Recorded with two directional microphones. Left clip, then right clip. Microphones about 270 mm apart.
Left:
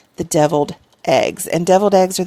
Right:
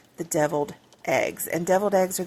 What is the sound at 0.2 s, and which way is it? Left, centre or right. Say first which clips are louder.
Speech: left 9 dB; left.